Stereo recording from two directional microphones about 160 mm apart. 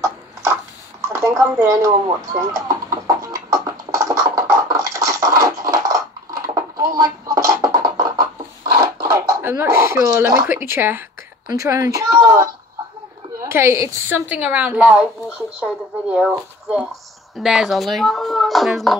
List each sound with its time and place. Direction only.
0.0 s a sound: 15° right (ahead or behind)
1.5 s a woman's voice: 15° right (ahead or behind)
1.9 s chicken: 25° right (ahead or behind)
7.0 s music: 20° right (ahead or behind)
8.7 s a sound: 25° right (ahead or behind)
9.4 s a woman's voice: 15° right (ahead or behind)